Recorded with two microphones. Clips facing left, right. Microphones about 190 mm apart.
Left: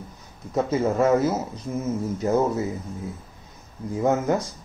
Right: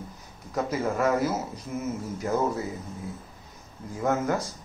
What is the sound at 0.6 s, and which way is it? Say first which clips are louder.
Speech: left 5 dB; 25° left (ahead or behind).